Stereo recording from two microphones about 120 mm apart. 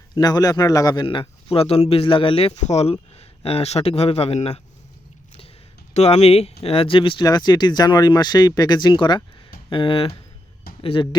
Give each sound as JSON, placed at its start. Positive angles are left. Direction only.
{"t": 0.1, "sound": "speech", "side_deg": 35}
{"t": 1.0, "sound": "speech", "side_deg": 45}
{"t": 2.5, "sound": "speech", "side_deg": 70}
{"t": 5.9, "sound": "speech", "side_deg": 65}
{"t": 7.3, "sound": "speech", "side_deg": 35}